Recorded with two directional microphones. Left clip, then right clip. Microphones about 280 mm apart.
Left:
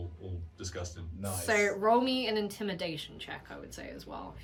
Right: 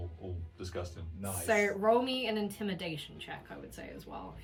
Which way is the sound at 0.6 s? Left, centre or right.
Right.